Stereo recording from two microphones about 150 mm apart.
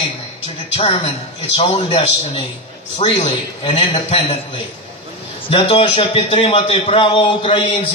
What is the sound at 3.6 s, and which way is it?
Speech, 30° left (ahead or behind).